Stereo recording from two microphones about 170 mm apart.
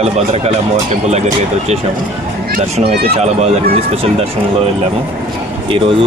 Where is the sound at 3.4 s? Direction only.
40° right (ahead or behind).